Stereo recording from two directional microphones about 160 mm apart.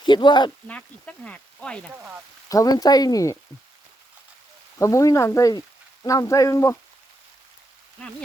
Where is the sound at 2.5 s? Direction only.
20° left (ahead or behind).